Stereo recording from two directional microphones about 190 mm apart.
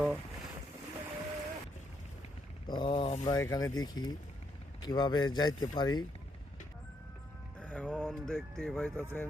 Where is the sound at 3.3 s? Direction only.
20° left (ahead or behind).